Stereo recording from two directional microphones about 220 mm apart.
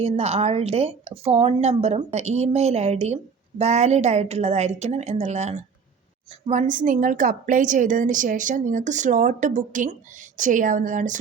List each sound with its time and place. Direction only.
0.0 s a woman's voice: 30° right (ahead or behind)